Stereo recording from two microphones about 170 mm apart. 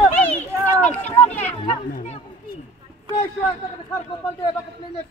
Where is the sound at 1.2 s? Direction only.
40° left (ahead or behind).